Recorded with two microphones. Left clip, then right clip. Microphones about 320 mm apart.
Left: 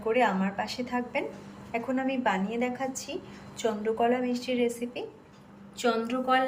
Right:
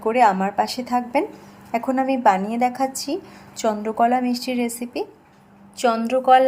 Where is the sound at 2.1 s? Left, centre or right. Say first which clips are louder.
Right 12 dB; centre.